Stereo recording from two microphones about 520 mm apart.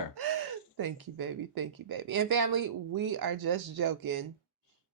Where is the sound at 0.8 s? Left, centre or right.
Right.